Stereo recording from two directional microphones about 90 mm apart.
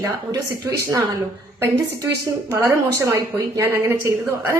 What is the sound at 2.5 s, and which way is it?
Speech, 35° right (ahead or behind).